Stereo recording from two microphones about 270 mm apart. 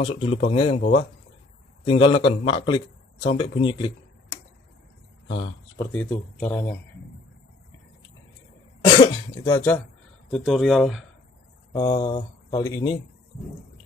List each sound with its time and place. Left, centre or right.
0.1 s speech: centre
1.9 s a man's voice: centre
5.3 s speech: centre
5.9 s a man's voice: centre
8.8 s a man's voice: centre
10.3 s speech: centre
11.7 s a man's voice: left